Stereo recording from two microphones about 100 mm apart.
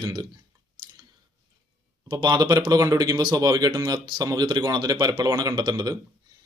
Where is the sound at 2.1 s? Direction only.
45° right (ahead or behind).